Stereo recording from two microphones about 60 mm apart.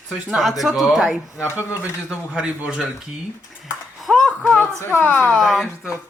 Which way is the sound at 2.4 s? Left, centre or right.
Centre.